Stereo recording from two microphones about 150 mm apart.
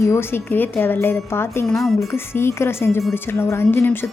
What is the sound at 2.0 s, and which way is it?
A woman's voice, 15° left (ahead or behind).